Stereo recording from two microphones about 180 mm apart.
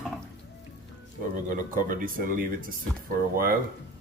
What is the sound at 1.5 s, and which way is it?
Speech, 50° right (ahead or behind).